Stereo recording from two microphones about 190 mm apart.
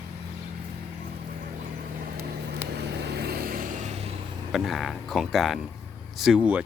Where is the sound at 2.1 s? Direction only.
55° right (ahead or behind); by 4.1 s 35° right (ahead or behind).